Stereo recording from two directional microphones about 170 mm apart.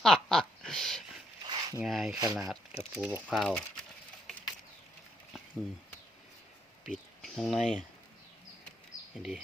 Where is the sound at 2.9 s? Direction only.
5° right (ahead or behind).